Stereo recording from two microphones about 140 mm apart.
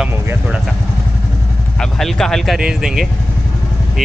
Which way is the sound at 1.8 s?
5° left (ahead or behind).